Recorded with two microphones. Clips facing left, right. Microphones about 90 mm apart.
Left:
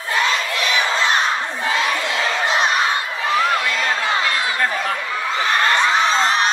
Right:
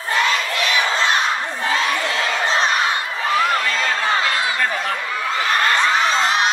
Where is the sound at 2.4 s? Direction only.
35° right (ahead or behind).